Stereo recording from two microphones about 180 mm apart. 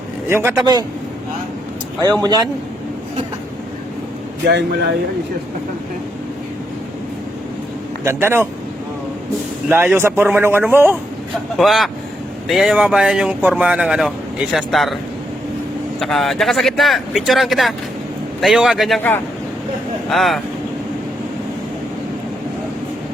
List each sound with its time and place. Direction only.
0.3 s a man's voice: 15° right (ahead or behind)
4.4 s speech: 70° right (ahead or behind)
8.0 s speech: 15° right (ahead or behind)
9.6 s speech: 10° right (ahead or behind)
11.5 s speech: centre (ahead or behind)
16.0 s speech: centre (ahead or behind)
20.1 s speech: centre (ahead or behind)